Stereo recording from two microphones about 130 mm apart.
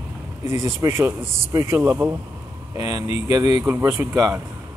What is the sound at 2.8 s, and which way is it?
Speech, 30° right (ahead or behind).